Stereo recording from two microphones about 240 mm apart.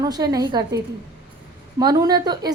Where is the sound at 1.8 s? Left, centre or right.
Centre.